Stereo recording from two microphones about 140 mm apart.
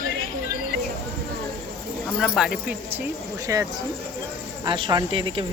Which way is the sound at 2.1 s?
10° left (ahead or behind).